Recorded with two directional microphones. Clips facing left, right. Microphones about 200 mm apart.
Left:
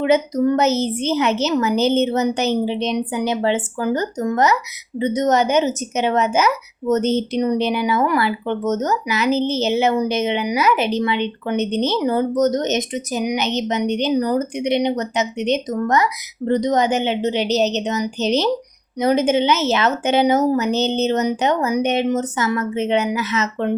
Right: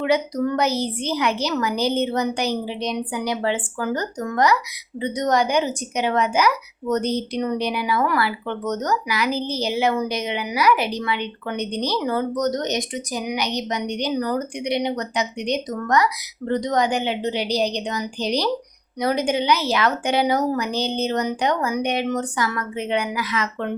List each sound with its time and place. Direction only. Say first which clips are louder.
0.0 s speech: left 4 dB; 25° left (ahead or behind)